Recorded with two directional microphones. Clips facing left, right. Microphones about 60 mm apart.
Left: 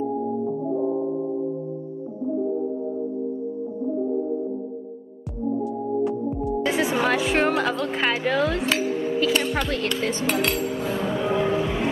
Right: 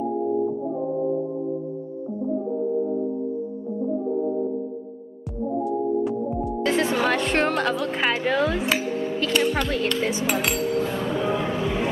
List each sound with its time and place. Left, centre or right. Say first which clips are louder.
6.4 s music: even; centre
10.0 s chink: left 1 dB; centre